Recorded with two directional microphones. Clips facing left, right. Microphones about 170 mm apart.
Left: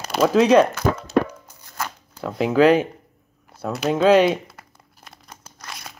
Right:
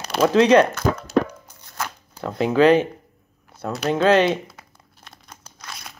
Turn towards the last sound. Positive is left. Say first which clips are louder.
# left 1 dB
turn(degrees=0)  # may be behind; listen again after turning